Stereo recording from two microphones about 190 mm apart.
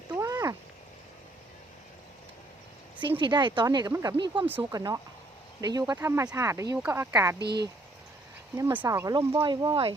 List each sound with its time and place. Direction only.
0.1 s cat: 15° right (ahead or behind)
3.2 s speech: 25° right (ahead or behind)
7.3 s speech: 60° right (ahead or behind)
8.5 s speech: 10° right (ahead or behind)